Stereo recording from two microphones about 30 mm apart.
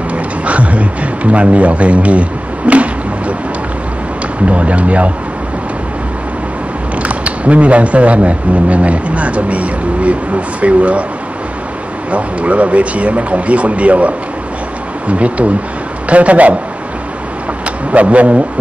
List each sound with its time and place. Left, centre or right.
0.5 s speech: right
4.5 s speech: right
7.0 s speech: right
12.1 s speech: right
17.9 s speech: right